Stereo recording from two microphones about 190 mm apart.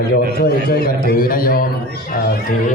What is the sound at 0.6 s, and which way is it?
A man's voice, 55° left (ahead or behind).